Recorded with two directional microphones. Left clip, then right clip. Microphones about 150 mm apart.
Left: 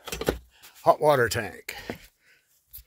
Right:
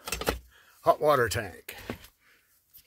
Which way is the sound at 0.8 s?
5° right (ahead or behind).